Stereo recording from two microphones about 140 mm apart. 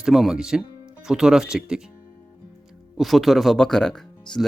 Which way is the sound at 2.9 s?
Centre (ahead or behind).